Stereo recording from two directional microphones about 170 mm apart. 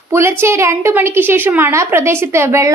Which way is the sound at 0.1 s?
15° right (ahead or behind).